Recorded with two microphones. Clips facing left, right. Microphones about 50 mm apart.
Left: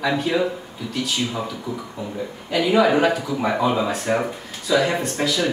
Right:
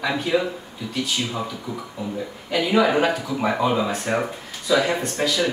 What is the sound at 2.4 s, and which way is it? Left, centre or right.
A woman's voice, centre.